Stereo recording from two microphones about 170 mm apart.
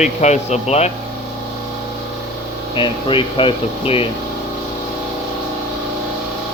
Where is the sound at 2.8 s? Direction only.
30° left (ahead or behind).